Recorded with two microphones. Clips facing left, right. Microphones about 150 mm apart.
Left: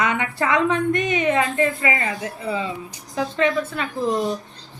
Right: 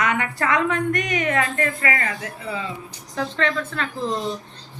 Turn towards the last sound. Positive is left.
turn(degrees=10)  # may be behind; listen again after turning